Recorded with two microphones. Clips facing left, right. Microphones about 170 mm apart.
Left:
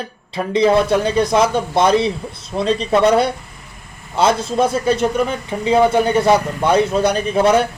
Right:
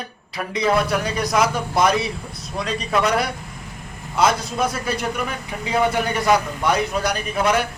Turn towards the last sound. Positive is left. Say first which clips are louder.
# left 6 dB
turn(degrees=30)  # may be behind; listen again after turning